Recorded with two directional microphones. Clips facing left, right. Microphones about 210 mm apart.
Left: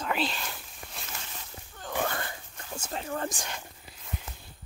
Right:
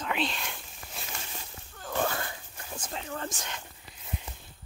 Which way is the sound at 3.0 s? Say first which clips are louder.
Left 3 dB; 35° left (ahead or behind).